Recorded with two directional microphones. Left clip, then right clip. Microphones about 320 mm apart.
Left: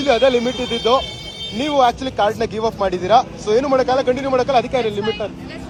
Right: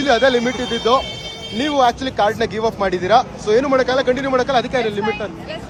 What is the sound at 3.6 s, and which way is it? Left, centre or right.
Speech, left.